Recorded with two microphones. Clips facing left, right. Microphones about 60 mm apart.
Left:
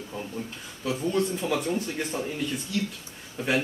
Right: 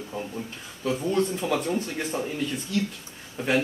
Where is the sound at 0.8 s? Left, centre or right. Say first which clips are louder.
Right 2 dB; centre.